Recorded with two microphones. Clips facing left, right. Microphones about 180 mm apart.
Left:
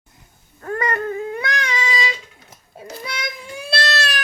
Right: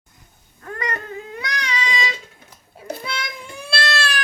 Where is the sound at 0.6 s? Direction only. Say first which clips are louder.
Left 5 dB; 45° left (ahead or behind).